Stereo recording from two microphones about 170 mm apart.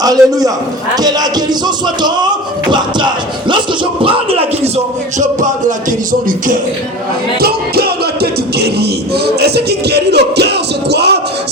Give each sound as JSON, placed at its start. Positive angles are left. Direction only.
{"t": 0.0, "sound": "music", "side_deg": -20}
{"t": 4.0, "sound": "speech", "side_deg": -30}
{"t": 5.4, "sound": "speech", "side_deg": -50}
{"t": 7.3, "sound": "music", "side_deg": -65}